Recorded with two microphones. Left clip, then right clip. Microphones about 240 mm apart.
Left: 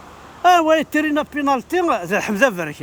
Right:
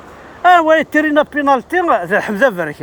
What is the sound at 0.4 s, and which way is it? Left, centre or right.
Speech, left.